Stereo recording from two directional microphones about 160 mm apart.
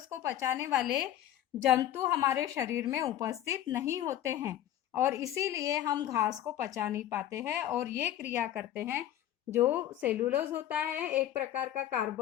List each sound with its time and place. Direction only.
0.1 s a woman's voice: 20° right (ahead or behind)
0.8 s a woman's voice: 5° right (ahead or behind)
1.8 s a woman's voice: 20° right (ahead or behind)